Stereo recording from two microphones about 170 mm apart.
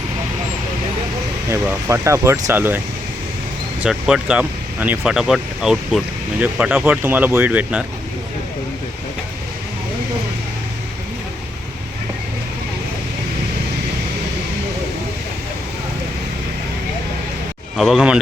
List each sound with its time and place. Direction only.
1.5 s speech: 15° right (ahead or behind)
3.8 s speech: 5° right (ahead or behind)
17.7 s speech: centre (ahead or behind)